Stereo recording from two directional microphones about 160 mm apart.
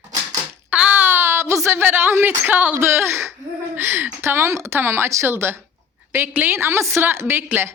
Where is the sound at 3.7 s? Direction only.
15° right (ahead or behind).